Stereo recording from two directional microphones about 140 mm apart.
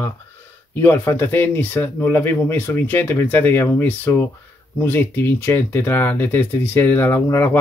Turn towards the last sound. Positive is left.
turn(degrees=15)  # may be behind; listen again after turning